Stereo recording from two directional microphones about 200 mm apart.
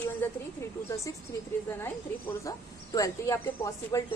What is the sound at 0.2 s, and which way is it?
Speech, 10° left (ahead or behind).